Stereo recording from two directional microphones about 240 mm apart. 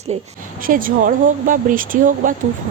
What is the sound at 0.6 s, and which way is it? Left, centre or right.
Speech, right.